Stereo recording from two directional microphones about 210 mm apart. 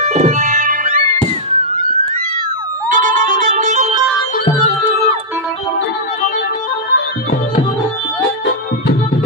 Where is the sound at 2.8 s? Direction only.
40° right (ahead or behind).